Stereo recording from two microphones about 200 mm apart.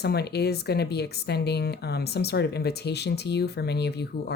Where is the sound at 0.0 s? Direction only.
55° left (ahead or behind).